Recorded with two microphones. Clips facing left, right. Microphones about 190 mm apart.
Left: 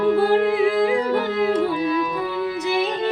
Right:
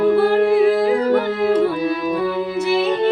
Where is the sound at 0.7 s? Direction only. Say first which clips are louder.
Right 3 dB; 35° right (ahead or behind).